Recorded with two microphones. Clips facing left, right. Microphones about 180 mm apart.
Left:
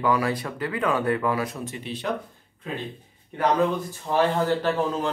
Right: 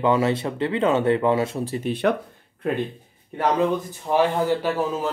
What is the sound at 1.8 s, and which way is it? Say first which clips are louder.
Speech: right 10 dB; 55° right (ahead or behind).